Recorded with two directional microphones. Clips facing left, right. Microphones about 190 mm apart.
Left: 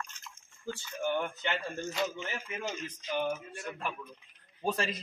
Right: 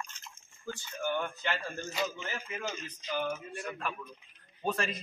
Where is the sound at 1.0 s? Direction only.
20° left (ahead or behind).